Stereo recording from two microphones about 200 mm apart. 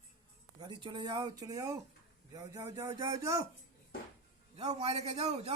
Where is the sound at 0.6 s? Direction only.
25° right (ahead or behind).